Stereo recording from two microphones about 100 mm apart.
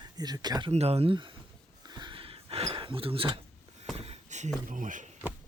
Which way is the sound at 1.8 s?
45° right (ahead or behind).